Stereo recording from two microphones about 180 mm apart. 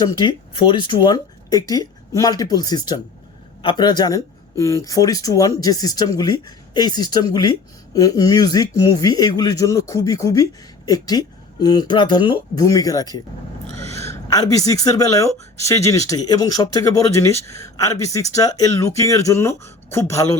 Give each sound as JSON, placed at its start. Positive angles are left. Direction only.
{"t": 0.0, "sound": "a man's voice", "side_deg": 25}